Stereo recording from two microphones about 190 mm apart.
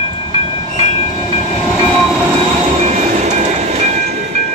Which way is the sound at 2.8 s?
35° right (ahead or behind).